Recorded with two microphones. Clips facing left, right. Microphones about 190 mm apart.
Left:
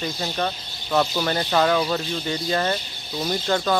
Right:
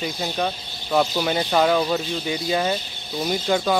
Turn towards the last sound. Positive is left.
turn(degrees=-10)  # may be behind; listen again after turning